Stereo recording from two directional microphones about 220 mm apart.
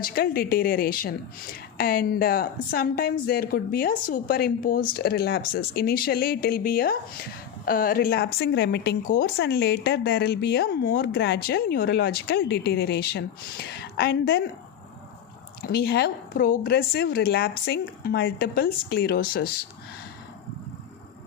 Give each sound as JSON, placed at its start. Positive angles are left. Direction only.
{"t": 0.0, "sound": "a woman's voice", "side_deg": 45}
{"t": 15.6, "sound": "speech", "side_deg": 45}